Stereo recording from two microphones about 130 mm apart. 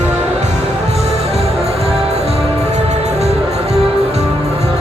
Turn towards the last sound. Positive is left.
turn(degrees=-55)  # may be behind; listen again after turning